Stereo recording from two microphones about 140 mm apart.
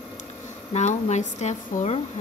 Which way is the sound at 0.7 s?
55° left (ahead or behind).